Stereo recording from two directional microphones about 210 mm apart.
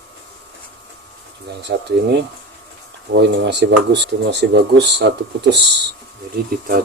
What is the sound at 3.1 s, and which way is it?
Speech, 55° right (ahead or behind).